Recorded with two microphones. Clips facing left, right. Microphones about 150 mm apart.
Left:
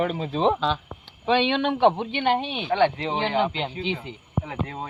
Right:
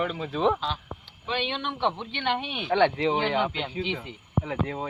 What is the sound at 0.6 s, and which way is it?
Speech, 90° left.